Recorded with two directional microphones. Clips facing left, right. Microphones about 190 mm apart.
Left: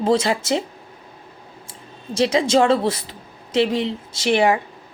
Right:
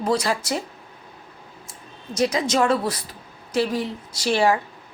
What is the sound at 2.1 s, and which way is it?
Speech, 25° left (ahead or behind).